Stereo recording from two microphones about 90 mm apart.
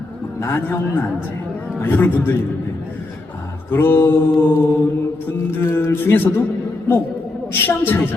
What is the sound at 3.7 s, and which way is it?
A man's voice, 25° left (ahead or behind).